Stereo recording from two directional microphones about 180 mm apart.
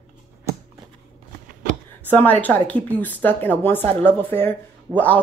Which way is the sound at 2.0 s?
10° left (ahead or behind).